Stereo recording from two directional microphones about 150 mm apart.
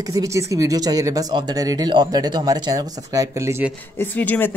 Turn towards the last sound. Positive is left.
turn(degrees=10)  # may be behind; listen again after turning